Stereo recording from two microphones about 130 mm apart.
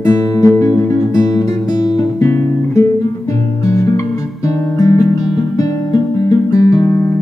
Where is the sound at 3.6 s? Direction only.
25° left (ahead or behind).